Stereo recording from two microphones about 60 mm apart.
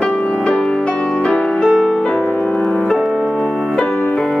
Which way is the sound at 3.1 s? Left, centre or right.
Centre.